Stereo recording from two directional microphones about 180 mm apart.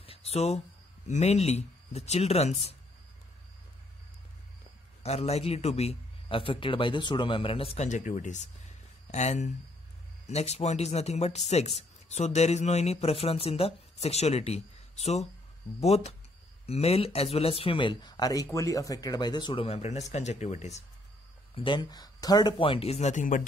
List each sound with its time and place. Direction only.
0.0 s a sound: 35° left (ahead or behind)
1.0 s speech: 40° left (ahead or behind)
5.0 s speech: 35° left (ahead or behind)
21.5 s speech: 25° left (ahead or behind); by 23.4 s 45° left (ahead or behind)